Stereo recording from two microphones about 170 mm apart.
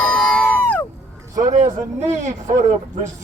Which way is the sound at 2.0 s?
45° right (ahead or behind).